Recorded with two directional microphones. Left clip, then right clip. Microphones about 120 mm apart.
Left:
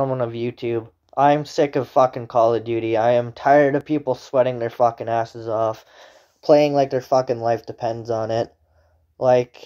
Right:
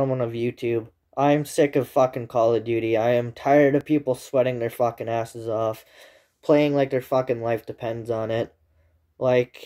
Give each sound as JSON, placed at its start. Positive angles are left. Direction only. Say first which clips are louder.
{"t": 0.0, "sound": "speech", "louder": "left 2 dB", "side_deg": -35}
{"t": 6.4, "sound": "speech", "louder": "left 4 dB", "side_deg": -10}
{"t": 7.0, "sound": "speech", "louder": "left 4 dB", "side_deg": -25}